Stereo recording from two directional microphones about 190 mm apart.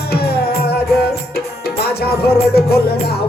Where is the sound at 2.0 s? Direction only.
55° left (ahead or behind).